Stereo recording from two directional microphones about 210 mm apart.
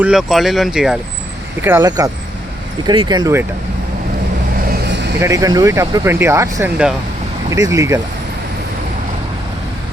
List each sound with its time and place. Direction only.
0.0 s speech: centre (ahead or behind)
1.6 s speech: 15° right (ahead or behind)
4.7 s vehicle: 55° right (ahead or behind)
5.2 s speech: 15° right (ahead or behind)